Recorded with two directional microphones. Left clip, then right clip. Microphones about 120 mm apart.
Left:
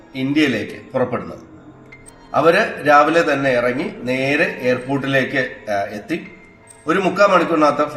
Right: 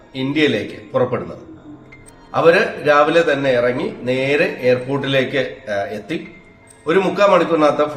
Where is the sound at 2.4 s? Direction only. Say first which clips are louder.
Right 2 dB; 20° right (ahead or behind).